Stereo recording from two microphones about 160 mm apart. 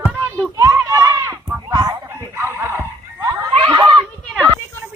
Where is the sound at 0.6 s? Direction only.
20° right (ahead or behind).